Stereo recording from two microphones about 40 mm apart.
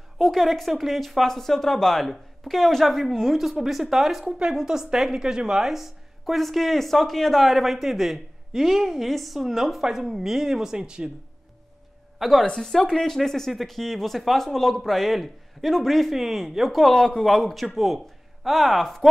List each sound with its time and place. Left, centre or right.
0.2 s a woman's voice: centre
4.6 s speech: centre
4.9 s a woman's voice: centre
12.2 s a woman's voice: centre
16.9 s speech: centre